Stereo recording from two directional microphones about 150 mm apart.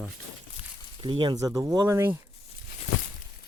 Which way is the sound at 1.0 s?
35° right (ahead or behind).